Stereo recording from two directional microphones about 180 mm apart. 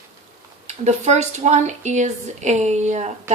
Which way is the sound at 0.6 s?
40° right (ahead or behind).